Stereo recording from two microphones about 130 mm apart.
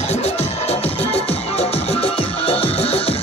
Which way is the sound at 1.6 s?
45° left (ahead or behind).